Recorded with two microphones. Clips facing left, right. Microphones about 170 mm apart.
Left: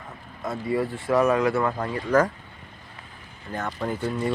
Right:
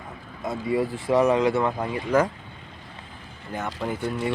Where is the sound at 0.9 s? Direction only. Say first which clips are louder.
Right 1 dB; centre (ahead or behind).